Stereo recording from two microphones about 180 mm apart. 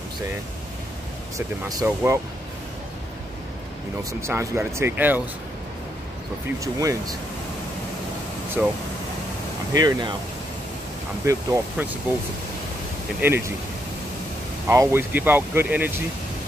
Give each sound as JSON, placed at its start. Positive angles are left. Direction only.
{"t": 1.7, "sound": "speech", "side_deg": -20}
{"t": 4.2, "sound": "speech", "side_deg": -15}
{"t": 6.6, "sound": "speech", "side_deg": -20}
{"t": 8.6, "sound": "speech", "side_deg": -5}
{"t": 9.8, "sound": "speech", "side_deg": -20}
{"t": 11.2, "sound": "speech", "side_deg": -15}
{"t": 13.2, "sound": "speech", "side_deg": -15}
{"t": 14.7, "sound": "speech", "side_deg": -15}